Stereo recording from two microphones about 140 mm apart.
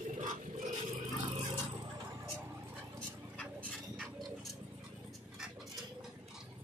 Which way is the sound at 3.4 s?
10° left (ahead or behind).